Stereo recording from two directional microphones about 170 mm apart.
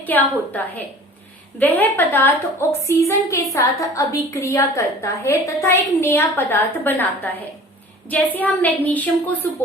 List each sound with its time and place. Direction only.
0.0 s a woman's voice: 10° left (ahead or behind)